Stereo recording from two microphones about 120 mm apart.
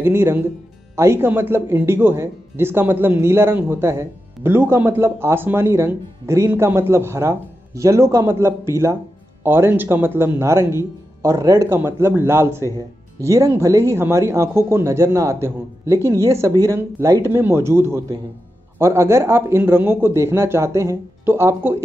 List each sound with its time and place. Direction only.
0.0 s speech: 20° right (ahead or behind)